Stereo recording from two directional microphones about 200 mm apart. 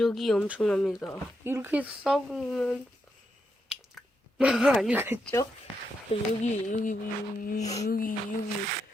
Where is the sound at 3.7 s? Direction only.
5° right (ahead or behind).